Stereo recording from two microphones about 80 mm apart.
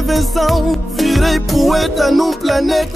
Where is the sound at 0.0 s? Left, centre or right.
Centre.